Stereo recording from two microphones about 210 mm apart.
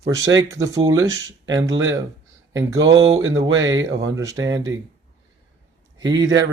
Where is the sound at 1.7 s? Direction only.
65° right (ahead or behind).